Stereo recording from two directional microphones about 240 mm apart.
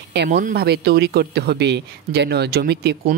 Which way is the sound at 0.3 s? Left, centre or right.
Right.